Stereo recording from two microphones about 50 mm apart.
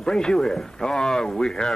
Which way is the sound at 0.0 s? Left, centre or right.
Centre.